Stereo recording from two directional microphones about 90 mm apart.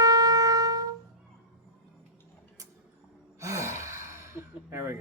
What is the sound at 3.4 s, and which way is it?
Gasp, 35° right (ahead or behind).